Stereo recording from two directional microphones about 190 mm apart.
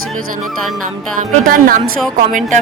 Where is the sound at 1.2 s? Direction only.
50° right (ahead or behind).